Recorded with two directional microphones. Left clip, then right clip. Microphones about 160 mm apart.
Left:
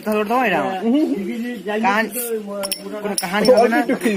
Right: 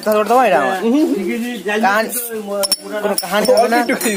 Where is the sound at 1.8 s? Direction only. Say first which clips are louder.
Right 3 dB; 40° right (ahead or behind).